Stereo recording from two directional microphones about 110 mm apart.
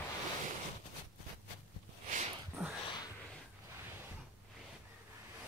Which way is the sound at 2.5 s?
5° right (ahead or behind).